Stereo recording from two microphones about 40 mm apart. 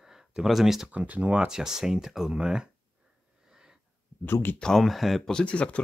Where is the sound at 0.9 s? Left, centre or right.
Right.